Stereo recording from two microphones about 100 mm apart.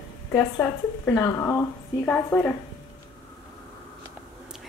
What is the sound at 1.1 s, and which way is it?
Speech, 30° left (ahead or behind).